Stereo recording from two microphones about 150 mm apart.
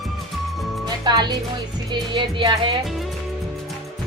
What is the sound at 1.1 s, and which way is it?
Music, 30° right (ahead or behind).